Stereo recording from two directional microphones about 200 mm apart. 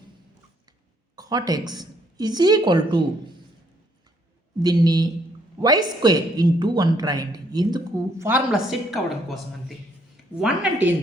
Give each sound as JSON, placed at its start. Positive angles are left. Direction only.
{"t": 1.1, "sound": "speech", "side_deg": -20}
{"t": 4.6, "sound": "speech", "side_deg": -20}
{"t": 8.3, "sound": "a woman's voice", "side_deg": 0}